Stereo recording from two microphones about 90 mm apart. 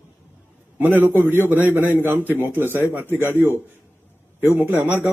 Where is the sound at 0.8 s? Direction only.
20° right (ahead or behind).